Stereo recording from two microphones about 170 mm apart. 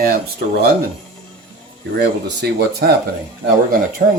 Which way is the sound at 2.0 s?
75° right (ahead or behind).